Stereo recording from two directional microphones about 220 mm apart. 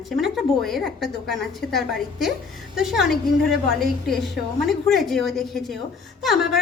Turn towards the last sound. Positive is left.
turn(degrees=0)  # may be behind; listen again after turning